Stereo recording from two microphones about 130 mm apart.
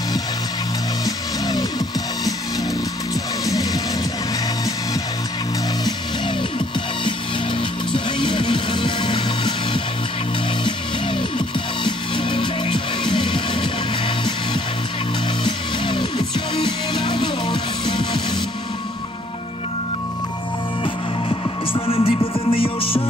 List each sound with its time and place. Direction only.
1.0 s music: 30° left (ahead or behind)
3.4 s music: 30° left (ahead or behind)
7.9 s music: 40° left (ahead or behind)
11.3 s music: 40° left (ahead or behind)
20.8 s music: 40° left (ahead or behind)